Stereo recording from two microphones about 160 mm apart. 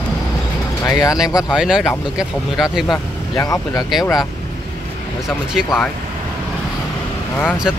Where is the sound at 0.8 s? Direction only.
25° left (ahead or behind).